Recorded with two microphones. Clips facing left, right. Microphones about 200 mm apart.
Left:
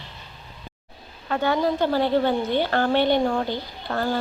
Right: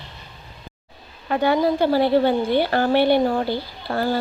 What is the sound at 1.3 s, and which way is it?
A woman's voice, 10° right (ahead or behind).